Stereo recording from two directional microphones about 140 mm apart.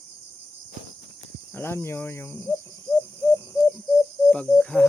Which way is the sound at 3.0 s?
20° left (ahead or behind).